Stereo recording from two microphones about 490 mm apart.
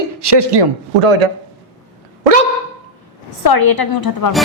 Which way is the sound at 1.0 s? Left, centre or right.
Right.